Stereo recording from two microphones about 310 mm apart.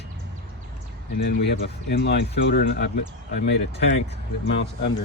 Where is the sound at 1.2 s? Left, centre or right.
Left.